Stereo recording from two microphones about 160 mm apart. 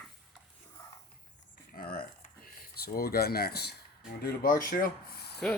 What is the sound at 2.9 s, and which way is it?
Speech, 70° left (ahead or behind).